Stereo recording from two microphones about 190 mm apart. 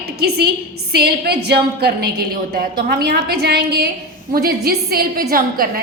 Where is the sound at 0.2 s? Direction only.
55° right (ahead or behind).